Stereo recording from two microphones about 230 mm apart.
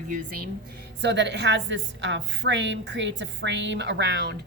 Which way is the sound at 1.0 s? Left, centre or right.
Right.